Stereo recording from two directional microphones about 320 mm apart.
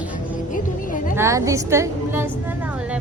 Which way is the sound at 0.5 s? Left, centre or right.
Left.